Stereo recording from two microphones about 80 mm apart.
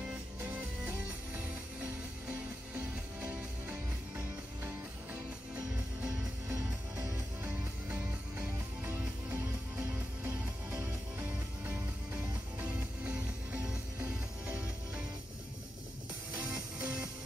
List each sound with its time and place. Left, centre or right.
0.4 s music: right
7.4 s music: centre
16.3 s music: centre